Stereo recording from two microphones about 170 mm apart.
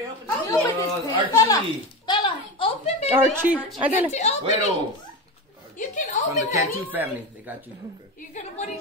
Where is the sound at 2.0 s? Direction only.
30° left (ahead or behind).